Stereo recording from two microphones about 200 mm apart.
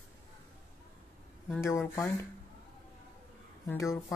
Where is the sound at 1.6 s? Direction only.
15° left (ahead or behind).